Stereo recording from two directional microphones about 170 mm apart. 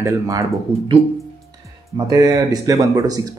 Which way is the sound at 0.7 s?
30° right (ahead or behind).